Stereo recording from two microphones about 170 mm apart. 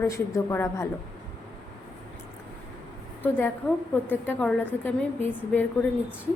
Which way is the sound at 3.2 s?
10° left (ahead or behind).